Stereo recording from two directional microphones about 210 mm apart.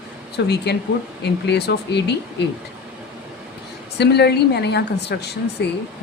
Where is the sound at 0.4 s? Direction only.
50° left (ahead or behind).